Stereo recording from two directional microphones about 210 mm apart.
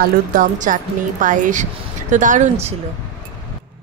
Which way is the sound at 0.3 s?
40° right (ahead or behind).